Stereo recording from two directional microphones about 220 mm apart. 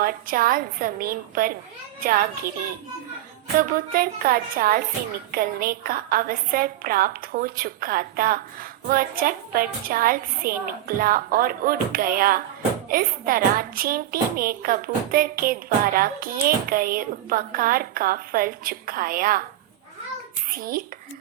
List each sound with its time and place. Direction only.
0.0 s a woman's voice: 40° right (ahead or behind)
3.7 s a woman's voice: 40° right (ahead or behind)
20.5 s a woman's voice: 40° right (ahead or behind)